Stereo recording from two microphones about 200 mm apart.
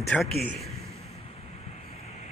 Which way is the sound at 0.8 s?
30° left (ahead or behind).